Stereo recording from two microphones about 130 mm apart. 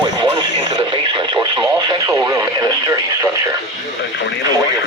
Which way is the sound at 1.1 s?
35° right (ahead or behind).